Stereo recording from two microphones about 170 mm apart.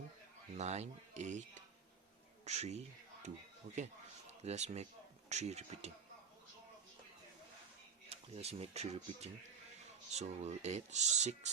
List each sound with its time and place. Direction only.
0.5 s speech: 40° right (ahead or behind)
4.4 s speech: 40° right (ahead or behind)
8.1 s speech: 35° right (ahead or behind)